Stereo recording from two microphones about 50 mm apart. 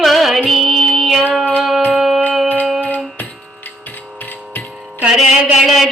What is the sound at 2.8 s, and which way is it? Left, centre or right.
Music, left.